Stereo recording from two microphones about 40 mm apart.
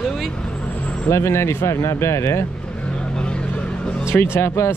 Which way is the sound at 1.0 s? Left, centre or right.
Left.